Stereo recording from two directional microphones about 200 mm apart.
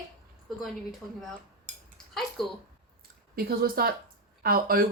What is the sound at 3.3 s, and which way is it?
A woman's voice, 50° right (ahead or behind).